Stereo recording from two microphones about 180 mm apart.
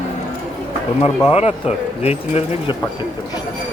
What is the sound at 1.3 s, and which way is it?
Speech, 35° left (ahead or behind).